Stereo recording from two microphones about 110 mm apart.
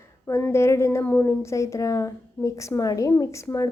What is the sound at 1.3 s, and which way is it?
A woman's voice, 25° left (ahead or behind).